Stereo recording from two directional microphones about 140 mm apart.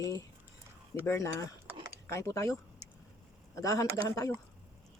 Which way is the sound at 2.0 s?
20° left (ahead or behind).